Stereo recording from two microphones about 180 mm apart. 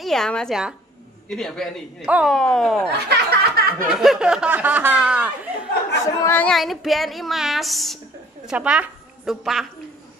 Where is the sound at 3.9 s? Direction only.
Centre (ahead or behind).